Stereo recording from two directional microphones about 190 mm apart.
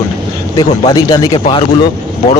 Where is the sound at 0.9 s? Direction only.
15° left (ahead or behind).